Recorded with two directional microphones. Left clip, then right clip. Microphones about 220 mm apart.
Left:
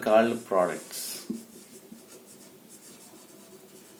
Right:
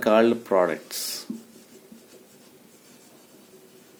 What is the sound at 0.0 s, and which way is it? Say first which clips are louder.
Speech: right 3 dB; 45° right (ahead or behind).